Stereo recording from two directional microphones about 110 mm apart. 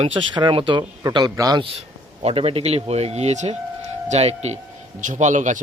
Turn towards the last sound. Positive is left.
turn(degrees=-90)